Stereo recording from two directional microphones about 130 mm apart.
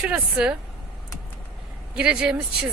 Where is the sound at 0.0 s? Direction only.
5° right (ahead or behind).